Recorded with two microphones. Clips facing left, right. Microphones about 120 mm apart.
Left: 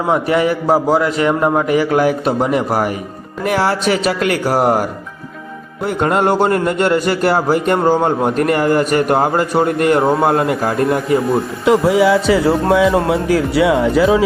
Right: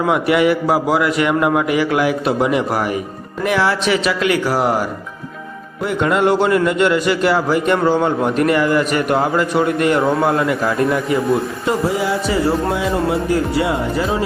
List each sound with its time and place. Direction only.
0.1 s a man's voice: 35° left (ahead or behind)
10.0 s a man's voice: 25° left (ahead or behind)
10.2 s a man's voice: 55° left (ahead or behind)
11.6 s speech: 90° left